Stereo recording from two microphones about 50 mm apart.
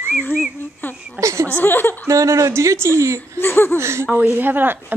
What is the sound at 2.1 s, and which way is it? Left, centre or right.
A woman's voice, right.